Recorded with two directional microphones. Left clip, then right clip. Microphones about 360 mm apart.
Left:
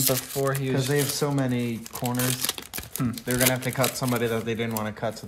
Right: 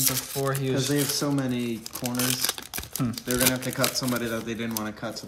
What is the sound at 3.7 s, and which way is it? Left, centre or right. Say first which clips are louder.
Speech: left 1 dB; centre.